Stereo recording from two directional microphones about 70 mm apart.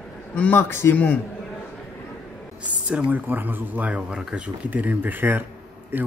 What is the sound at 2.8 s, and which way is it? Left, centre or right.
Speech, centre.